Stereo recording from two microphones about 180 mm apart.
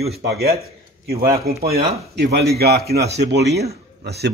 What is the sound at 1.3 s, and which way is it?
Speech, 60° right (ahead or behind).